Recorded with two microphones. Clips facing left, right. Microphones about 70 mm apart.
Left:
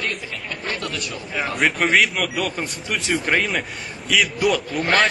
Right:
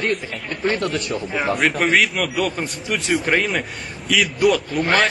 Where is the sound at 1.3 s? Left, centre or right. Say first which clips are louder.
Right 1 dB; centre.